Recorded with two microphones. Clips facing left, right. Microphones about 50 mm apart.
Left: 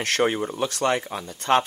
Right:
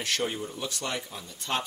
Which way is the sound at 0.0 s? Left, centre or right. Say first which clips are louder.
Left 8 dB; left.